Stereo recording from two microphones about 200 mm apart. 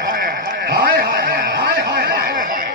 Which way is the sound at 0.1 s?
45° right (ahead or behind).